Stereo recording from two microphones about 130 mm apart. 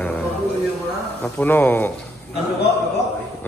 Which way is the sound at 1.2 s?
15° left (ahead or behind).